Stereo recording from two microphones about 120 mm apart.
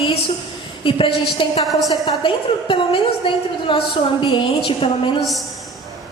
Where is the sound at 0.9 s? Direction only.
45° left (ahead or behind).